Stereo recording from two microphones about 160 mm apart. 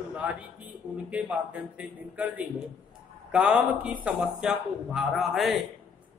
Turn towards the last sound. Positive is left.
turn(degrees=0)  # may be behind; listen again after turning